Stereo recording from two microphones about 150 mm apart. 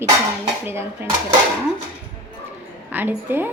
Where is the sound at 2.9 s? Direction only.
15° right (ahead or behind).